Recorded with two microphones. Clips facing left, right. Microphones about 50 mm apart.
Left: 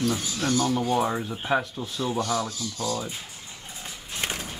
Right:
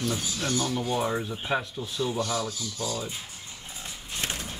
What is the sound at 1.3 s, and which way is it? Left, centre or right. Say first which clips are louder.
Speech: left 3 dB; centre.